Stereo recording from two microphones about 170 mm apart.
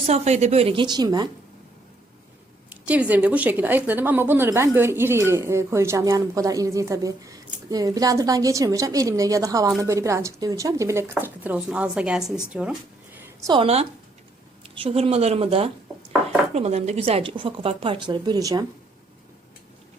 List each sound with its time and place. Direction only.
0.0 s speech: 40° right (ahead or behind); by 1.3 s 25° right (ahead or behind)
2.6 s a woman's voice: 10° right (ahead or behind)
13.4 s speech: 30° right (ahead or behind)